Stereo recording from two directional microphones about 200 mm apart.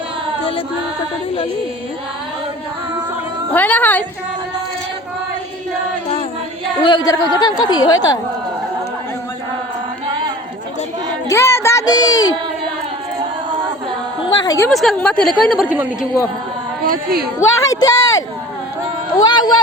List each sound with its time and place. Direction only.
3.5 s a woman's voice: 10° left (ahead or behind)
6.8 s a woman's voice: 20° left (ahead or behind)
11.3 s a child's voice: 15° left (ahead or behind)
14.3 s a sound: 20° left (ahead or behind)
14.7 s a woman's voice: centre (ahead or behind)
16.8 s speech: 45° right (ahead or behind)
17.7 s a sound: 15° left (ahead or behind)
19.1 s speech: 20° left (ahead or behind)